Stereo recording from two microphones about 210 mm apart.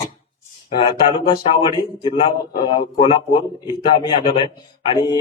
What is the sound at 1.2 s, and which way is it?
Speech, 20° left (ahead or behind).